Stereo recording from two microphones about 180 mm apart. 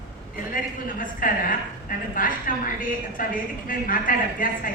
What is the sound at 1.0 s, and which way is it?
A woman's voice, 50° left (ahead or behind).